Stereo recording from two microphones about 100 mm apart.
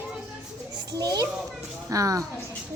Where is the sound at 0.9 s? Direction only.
45° right (ahead or behind).